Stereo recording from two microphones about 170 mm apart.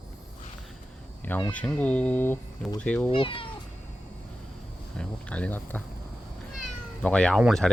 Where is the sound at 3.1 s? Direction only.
30° left (ahead or behind).